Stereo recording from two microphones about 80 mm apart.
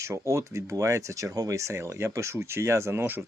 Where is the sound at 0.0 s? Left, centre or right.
Right.